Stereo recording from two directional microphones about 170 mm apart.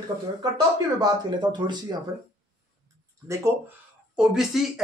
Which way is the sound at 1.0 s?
25° right (ahead or behind).